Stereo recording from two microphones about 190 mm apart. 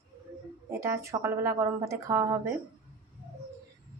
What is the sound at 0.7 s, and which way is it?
Speech, 15° right (ahead or behind).